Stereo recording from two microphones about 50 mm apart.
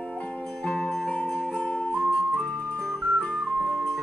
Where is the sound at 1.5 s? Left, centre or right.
Left.